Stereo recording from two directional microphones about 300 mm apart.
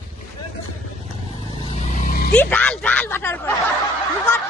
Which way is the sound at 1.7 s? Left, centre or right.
Left.